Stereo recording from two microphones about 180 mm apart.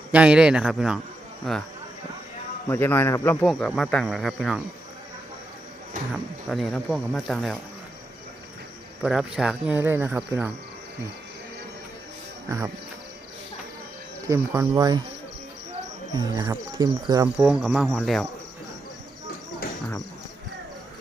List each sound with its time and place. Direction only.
0.1 s speech: 5° right (ahead or behind)
2.6 s a man's voice: 10° left (ahead or behind)
3.4 s speech: centre (ahead or behind)
6.5 s speech: centre (ahead or behind)
9.0 s speech: 5° right (ahead or behind)
12.5 s speech: 20° right (ahead or behind)
14.3 s speech: 20° right (ahead or behind)
16.1 s speech: 20° right (ahead or behind)
17.3 s speech: centre (ahead or behind)